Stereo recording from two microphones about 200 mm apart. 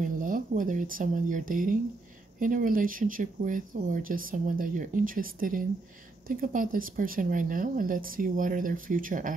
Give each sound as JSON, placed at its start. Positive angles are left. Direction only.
{"t": 0.0, "sound": "speech", "side_deg": -40}